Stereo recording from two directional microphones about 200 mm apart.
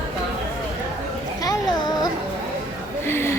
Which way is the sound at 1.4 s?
20° left (ahead or behind).